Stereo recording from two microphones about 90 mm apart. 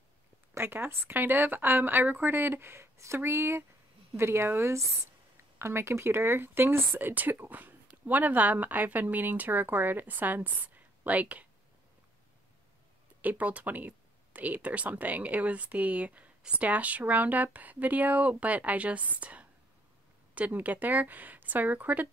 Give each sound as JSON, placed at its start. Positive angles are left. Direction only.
{"t": 0.6, "sound": "speech", "side_deg": -25}
{"t": 13.2, "sound": "speech", "side_deg": -15}